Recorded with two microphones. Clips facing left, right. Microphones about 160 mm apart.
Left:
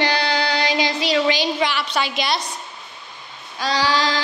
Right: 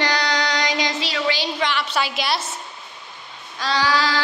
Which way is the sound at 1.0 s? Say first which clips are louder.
Left 5 dB; 15° left (ahead or behind).